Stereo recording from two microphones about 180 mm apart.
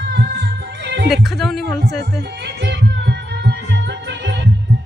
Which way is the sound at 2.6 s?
70° right (ahead or behind).